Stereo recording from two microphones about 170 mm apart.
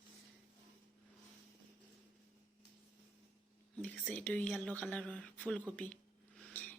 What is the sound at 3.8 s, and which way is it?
A woman's voice, 10° left (ahead or behind).